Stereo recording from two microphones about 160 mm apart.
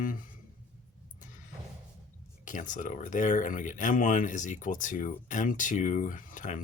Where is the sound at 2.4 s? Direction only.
55° left (ahead or behind).